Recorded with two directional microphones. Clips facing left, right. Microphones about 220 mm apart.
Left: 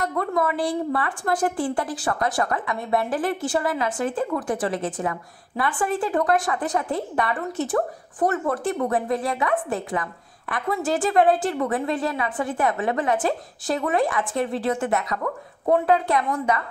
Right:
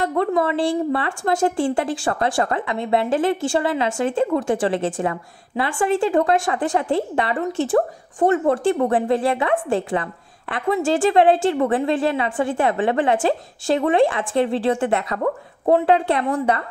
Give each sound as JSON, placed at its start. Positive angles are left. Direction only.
{"t": 0.0, "sound": "a woman's voice", "side_deg": -25}